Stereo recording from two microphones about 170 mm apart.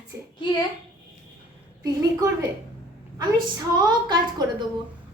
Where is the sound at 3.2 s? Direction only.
25° right (ahead or behind).